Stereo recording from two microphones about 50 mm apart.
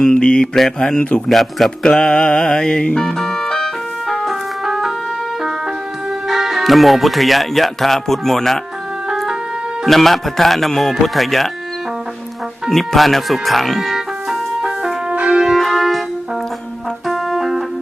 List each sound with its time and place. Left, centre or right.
0.1 s mantra: centre
1.3 s speech: centre
1.8 s music: centre
4.1 s music: centre
6.2 s speech: centre
9.8 s speech: centre
12.7 s music: centre
15.3 s church bell: centre
15.5 s music: centre
17.1 s music: centre